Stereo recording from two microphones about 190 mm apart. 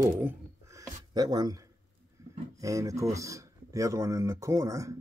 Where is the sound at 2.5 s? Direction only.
15° right (ahead or behind).